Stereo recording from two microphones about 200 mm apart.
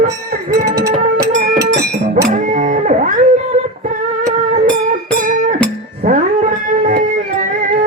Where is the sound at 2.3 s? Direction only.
40° right (ahead or behind).